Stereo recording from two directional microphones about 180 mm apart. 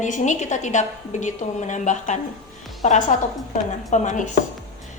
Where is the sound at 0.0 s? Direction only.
40° left (ahead or behind).